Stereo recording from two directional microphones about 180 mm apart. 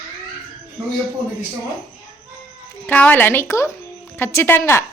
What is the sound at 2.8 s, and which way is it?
A woman's voice, 10° left (ahead or behind).